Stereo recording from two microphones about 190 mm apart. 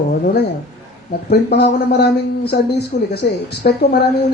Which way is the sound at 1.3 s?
60° left (ahead or behind).